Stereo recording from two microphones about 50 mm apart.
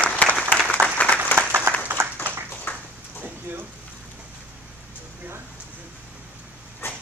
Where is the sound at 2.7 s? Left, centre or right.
Left.